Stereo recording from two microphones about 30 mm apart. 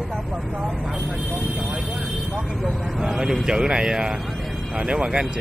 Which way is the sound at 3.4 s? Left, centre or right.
Right.